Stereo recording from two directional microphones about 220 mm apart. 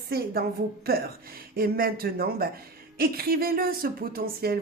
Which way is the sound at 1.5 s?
40° right (ahead or behind).